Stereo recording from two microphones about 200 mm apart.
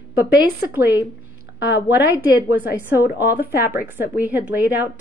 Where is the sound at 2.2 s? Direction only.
10° right (ahead or behind).